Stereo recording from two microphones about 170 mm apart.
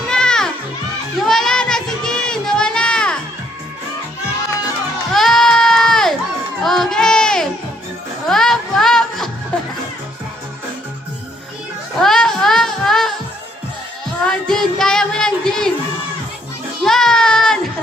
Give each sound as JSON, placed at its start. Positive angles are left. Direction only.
{"t": 0.1, "sound": "children playing", "side_deg": 5}
{"t": 1.3, "sound": "a sound", "side_deg": 0}
{"t": 5.1, "sound": "crowd", "side_deg": 0}
{"t": 6.6, "sound": "a sound", "side_deg": 0}
{"t": 8.3, "sound": "music", "side_deg": 0}
{"t": 11.9, "sound": "music", "side_deg": 0}
{"t": 14.3, "sound": "child singing", "side_deg": 5}
{"t": 16.8, "sound": "child singing", "side_deg": 5}